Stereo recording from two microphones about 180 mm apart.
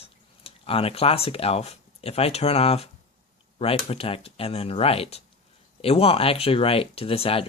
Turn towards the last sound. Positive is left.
turn(degrees=30)  # may be behind; listen again after turning